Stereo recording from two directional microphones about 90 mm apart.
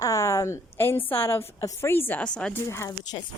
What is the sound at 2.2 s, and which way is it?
Speech, 10° left (ahead or behind).